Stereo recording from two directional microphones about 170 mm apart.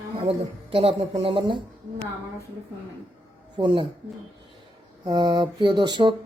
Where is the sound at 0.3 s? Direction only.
35° right (ahead or behind).